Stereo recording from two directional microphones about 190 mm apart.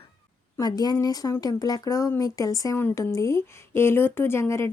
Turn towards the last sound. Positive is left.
turn(degrees=15)  # may be behind; listen again after turning